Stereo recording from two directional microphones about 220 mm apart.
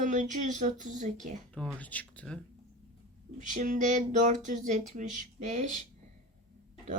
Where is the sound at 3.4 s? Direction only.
35° right (ahead or behind).